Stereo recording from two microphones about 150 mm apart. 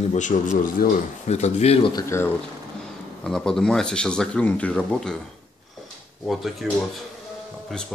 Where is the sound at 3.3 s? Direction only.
Centre (ahead or behind).